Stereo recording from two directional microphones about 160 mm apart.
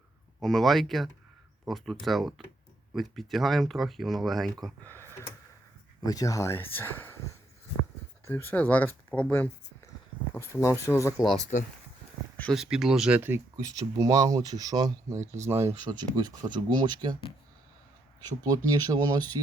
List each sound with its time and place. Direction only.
0.4 s speech: centre (ahead or behind)
4.8 s speech: 15° left (ahead or behind)
6.1 s speech: 20° left (ahead or behind)
8.2 s speech: 10° left (ahead or behind)
11.2 s speech: 5° right (ahead or behind)
12.4 s speech: centre (ahead or behind); by 17.2 s 25° right (ahead or behind)
18.4 s speech: 20° right (ahead or behind)